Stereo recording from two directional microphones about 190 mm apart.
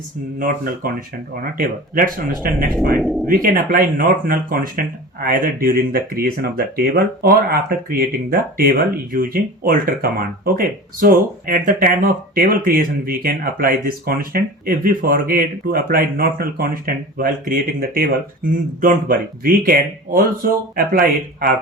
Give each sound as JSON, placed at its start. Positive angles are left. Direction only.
{"t": 0.3, "sound": "speech", "side_deg": -45}
{"t": 3.0, "sound": "speech", "side_deg": 0}
{"t": 3.2, "sound": "speech", "side_deg": -45}